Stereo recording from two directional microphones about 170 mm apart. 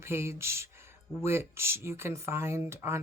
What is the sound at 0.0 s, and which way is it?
Speech, 15° right (ahead or behind).